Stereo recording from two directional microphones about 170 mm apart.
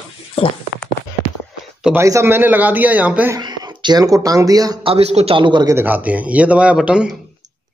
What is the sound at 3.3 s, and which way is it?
Speech, 25° right (ahead or behind).